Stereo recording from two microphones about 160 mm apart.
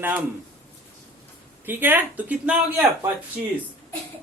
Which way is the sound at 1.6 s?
10° right (ahead or behind).